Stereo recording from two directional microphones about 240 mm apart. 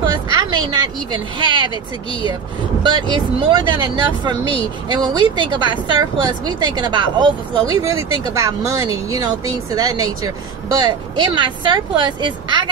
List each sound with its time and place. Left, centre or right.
0.0 s speech: centre
2.8 s speech: centre